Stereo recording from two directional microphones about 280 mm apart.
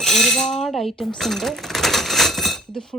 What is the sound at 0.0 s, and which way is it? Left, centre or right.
Speech, centre.